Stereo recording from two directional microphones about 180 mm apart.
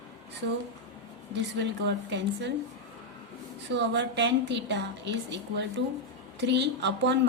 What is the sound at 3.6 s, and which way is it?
A woman's voice, 75° right (ahead or behind).